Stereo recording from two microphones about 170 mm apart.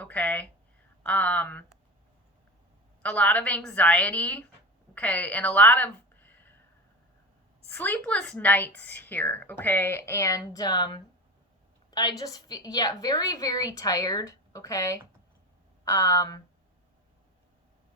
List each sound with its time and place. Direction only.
0.0 s a woman's voice: 10° left (ahead or behind)
3.0 s a woman's voice: 5° left (ahead or behind)
7.7 s a woman's voice: 10° left (ahead or behind)